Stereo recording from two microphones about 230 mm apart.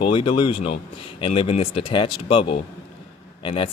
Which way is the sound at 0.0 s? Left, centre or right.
Left.